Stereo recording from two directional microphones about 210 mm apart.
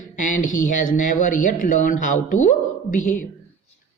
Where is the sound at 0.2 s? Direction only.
40° left (ahead or behind).